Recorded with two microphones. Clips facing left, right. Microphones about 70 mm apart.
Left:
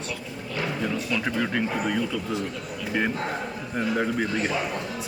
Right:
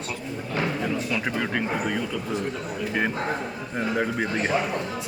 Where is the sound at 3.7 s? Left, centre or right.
Centre.